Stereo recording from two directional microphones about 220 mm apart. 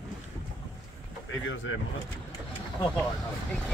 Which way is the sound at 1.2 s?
60° left (ahead or behind).